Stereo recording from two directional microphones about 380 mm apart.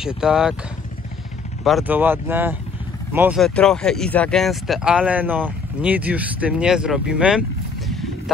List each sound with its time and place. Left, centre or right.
0.0 s speech: centre
1.6 s speech: centre